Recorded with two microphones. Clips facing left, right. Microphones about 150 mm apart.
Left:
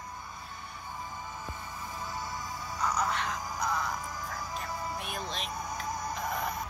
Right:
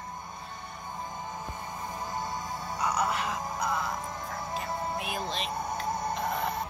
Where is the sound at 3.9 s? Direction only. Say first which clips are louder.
Right 2 dB; 25° right (ahead or behind).